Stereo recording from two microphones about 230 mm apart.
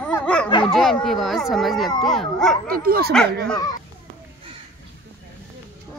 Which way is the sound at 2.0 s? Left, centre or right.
Centre.